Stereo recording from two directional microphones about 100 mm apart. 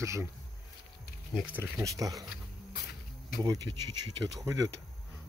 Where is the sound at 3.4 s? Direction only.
45° right (ahead or behind).